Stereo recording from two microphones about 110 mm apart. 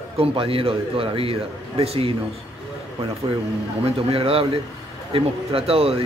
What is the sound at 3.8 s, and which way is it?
Speech, 60° right (ahead or behind).